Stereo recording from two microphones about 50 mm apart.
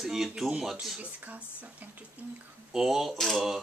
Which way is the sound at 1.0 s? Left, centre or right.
Right.